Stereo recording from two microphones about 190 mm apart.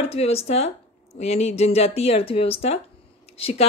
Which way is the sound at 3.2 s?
30° left (ahead or behind).